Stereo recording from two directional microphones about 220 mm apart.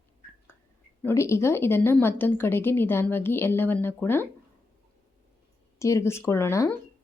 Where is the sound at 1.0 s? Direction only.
10° left (ahead or behind).